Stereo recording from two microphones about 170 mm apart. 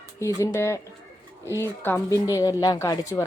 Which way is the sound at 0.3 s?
15° left (ahead or behind).